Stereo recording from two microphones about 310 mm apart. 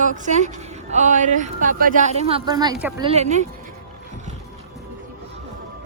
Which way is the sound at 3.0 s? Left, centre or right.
Right.